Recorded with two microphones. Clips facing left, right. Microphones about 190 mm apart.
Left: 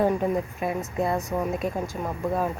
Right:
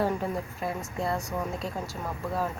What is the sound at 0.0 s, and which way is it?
Speech, 20° left (ahead or behind).